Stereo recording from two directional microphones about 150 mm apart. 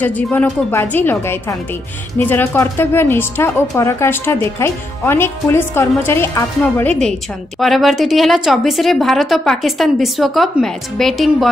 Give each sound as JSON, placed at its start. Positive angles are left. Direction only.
{"t": 0.0, "sound": "a woman's voice", "side_deg": 10}